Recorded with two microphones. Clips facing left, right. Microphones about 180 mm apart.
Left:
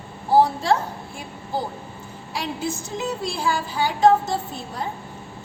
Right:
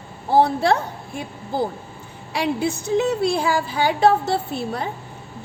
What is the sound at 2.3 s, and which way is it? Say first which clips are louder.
A woman's voice: right 6 dB; 70° right (ahead or behind).